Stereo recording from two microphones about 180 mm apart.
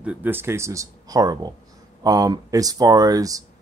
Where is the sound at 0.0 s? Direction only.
10° right (ahead or behind).